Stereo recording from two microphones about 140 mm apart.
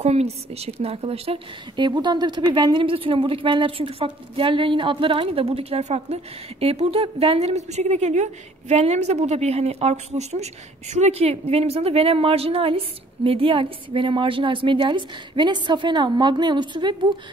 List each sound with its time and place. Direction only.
0.0 s a woman's voice: 50° right (ahead or behind); by 17.1 s 35° right (ahead or behind)